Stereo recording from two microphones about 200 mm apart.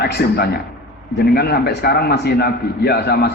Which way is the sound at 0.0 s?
50° left (ahead or behind).